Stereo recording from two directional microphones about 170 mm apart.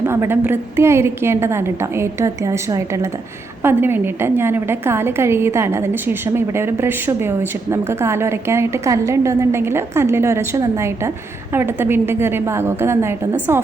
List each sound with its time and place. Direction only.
0.0 s a woman's voice: 15° right (ahead or behind)